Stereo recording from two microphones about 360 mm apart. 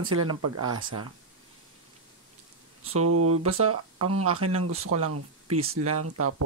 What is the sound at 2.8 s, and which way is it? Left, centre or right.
Speech, right.